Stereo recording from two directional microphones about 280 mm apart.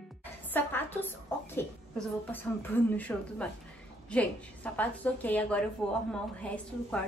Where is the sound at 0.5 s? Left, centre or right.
Centre.